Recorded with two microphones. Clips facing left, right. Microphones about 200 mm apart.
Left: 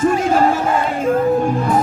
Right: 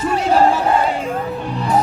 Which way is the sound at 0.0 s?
45° left (ahead or behind).